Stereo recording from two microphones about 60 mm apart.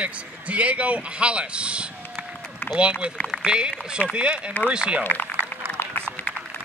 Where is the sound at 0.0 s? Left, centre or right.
Right.